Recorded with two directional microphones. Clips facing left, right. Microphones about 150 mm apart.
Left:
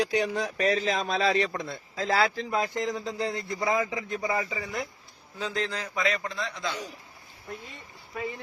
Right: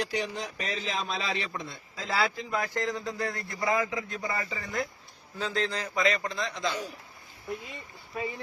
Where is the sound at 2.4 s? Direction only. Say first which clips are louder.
Left 2 dB; 20° left (ahead or behind).